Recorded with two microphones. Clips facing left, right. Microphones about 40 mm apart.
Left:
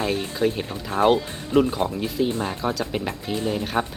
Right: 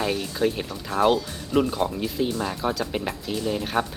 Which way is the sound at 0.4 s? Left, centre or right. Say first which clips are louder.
Left 1 dB; centre.